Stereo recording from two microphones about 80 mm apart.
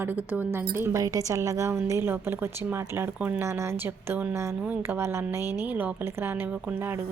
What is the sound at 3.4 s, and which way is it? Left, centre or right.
A woman's voice, right.